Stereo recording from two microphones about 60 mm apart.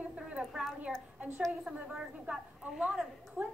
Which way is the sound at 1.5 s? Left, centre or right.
Centre.